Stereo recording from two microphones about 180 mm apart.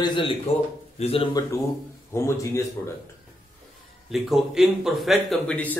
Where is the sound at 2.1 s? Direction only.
15° left (ahead or behind).